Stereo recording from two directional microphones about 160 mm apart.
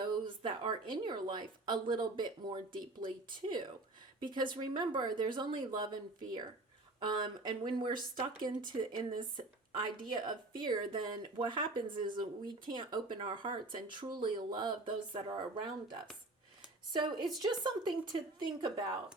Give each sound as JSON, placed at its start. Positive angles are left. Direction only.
{"t": 0.0, "sound": "speech", "side_deg": -30}